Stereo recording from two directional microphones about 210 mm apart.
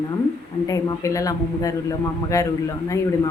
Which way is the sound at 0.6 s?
15° left (ahead or behind).